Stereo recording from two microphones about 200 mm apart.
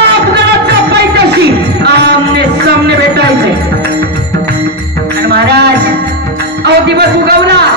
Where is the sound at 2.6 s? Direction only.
55° right (ahead or behind).